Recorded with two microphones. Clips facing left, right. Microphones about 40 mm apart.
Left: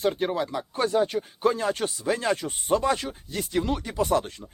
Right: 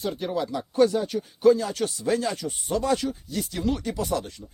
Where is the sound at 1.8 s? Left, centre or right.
Centre.